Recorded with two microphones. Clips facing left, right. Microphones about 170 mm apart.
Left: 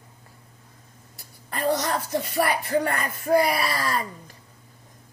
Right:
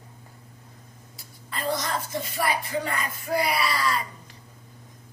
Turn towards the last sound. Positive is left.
turn(degrees=50)  # may be behind; listen again after turning